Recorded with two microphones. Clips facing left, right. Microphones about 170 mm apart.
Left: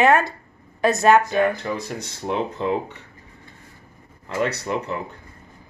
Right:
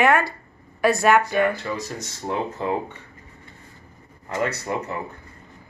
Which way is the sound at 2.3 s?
75° left (ahead or behind).